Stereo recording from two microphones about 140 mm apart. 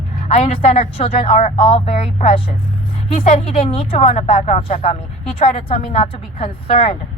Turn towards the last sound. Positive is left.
turn(degrees=45)  # may be behind; listen again after turning